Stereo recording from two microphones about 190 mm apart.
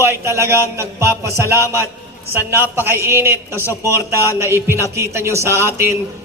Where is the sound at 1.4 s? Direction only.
15° left (ahead or behind).